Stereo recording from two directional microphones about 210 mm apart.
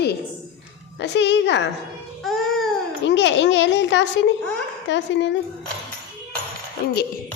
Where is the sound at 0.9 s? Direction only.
55° left (ahead or behind).